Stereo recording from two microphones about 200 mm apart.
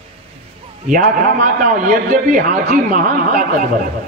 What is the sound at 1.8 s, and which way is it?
A man's voice, 40° right (ahead or behind).